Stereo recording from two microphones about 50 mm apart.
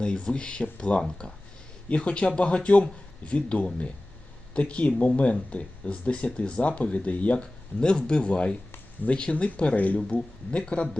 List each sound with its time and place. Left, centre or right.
0.0 s speech: centre
10.2 s speech: left